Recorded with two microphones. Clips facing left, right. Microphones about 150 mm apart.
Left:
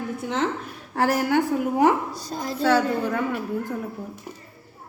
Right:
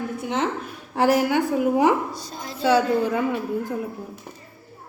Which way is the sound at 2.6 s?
10° right (ahead or behind).